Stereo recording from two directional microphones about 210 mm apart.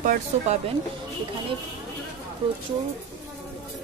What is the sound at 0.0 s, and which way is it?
Speech, 40° right (ahead or behind).